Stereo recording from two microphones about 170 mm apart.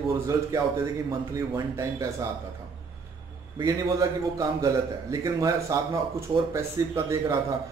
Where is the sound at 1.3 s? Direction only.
20° right (ahead or behind).